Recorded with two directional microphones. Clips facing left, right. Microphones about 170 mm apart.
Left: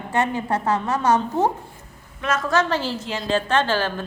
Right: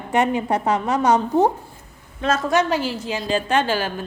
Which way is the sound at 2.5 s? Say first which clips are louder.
Right 2 dB; 15° right (ahead or behind).